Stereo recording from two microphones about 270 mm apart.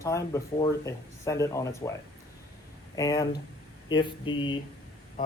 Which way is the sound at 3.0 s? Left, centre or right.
Centre.